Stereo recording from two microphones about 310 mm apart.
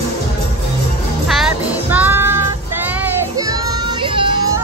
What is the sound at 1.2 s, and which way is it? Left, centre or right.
Music, centre.